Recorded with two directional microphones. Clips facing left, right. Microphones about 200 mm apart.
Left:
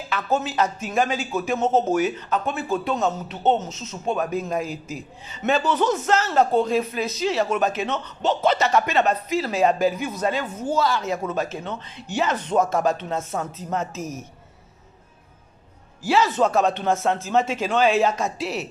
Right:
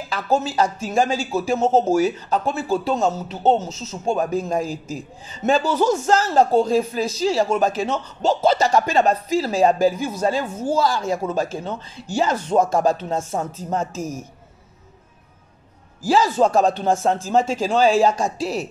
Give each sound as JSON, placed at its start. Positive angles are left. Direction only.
{"t": 0.1, "sound": "a man's voice", "side_deg": -30}
{"t": 16.1, "sound": "speech", "side_deg": -35}